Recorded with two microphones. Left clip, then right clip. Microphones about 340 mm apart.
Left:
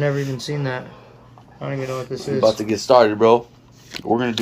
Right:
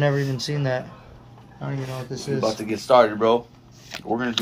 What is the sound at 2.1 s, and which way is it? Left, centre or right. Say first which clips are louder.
Speech: left 7 dB; left.